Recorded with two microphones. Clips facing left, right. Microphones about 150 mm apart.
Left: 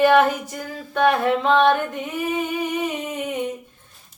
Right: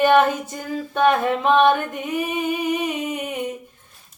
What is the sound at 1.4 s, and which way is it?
Music, 15° right (ahead or behind).